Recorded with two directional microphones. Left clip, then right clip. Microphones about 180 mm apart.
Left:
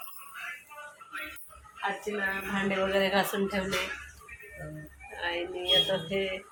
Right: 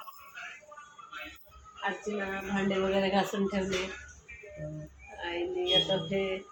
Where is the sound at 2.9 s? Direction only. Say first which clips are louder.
Left 2 dB; 5° left (ahead or behind).